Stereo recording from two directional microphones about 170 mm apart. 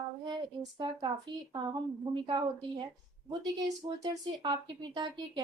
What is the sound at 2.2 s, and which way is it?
Speech, 30° right (ahead or behind).